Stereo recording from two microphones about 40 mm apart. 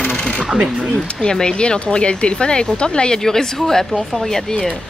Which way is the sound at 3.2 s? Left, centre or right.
Centre.